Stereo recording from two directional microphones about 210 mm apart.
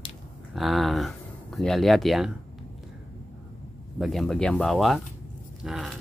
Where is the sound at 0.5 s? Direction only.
Centre (ahead or behind).